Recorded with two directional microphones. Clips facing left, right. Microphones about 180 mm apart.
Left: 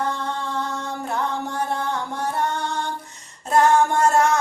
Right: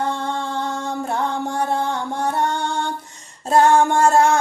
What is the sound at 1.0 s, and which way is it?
Music, 30° right (ahead or behind).